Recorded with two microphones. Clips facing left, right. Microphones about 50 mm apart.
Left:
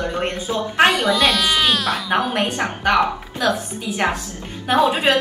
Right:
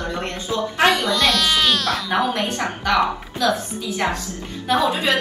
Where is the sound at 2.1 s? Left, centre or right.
Left.